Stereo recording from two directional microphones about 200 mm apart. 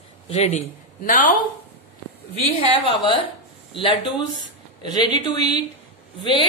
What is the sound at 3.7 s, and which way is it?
Speech, 25° left (ahead or behind).